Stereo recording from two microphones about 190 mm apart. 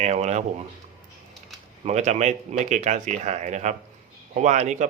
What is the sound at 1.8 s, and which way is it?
Speech, 35° right (ahead or behind).